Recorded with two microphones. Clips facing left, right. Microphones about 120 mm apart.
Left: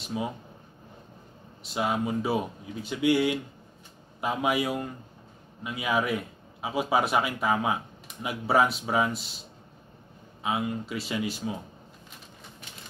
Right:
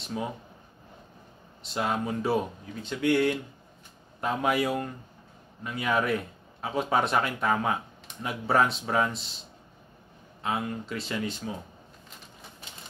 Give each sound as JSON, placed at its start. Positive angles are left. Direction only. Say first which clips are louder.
{"t": 0.0, "sound": "speech", "louder": "left 1 dB", "side_deg": 5}
{"t": 1.6, "sound": "a man's voice", "louder": "left 1 dB", "side_deg": 5}
{"t": 10.4, "sound": "speech", "louder": "left 1 dB", "side_deg": 5}